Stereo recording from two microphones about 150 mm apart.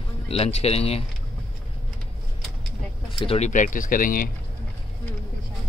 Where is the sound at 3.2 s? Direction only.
45° left (ahead or behind); by 4.3 s 70° left (ahead or behind).